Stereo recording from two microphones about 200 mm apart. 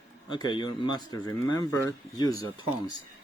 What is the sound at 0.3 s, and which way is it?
Speech, 20° left (ahead or behind).